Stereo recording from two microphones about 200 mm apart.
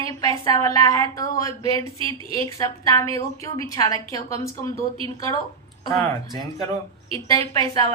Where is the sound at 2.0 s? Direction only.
25° right (ahead or behind).